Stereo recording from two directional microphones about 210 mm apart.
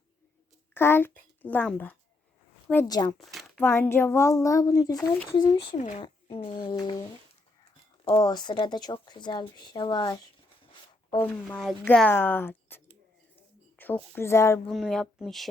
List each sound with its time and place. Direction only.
0.7 s a child's voice: 10° left (ahead or behind)
3.2 s speech: centre (ahead or behind); by 5.7 s 20° left (ahead or behind)
5.7 s speech: 35° left (ahead or behind)
8.0 s speech: 20° left (ahead or behind)
11.1 s speech: 5° left (ahead or behind)
14.7 s speech: centre (ahead or behind)